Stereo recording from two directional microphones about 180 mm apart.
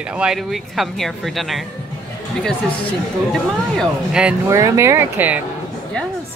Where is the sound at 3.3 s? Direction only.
Centre (ahead or behind).